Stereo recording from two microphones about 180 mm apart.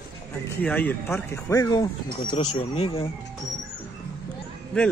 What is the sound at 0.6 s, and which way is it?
Speech, 10° left (ahead or behind).